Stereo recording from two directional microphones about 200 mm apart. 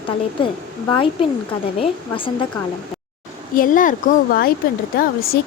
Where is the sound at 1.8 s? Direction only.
25° left (ahead or behind).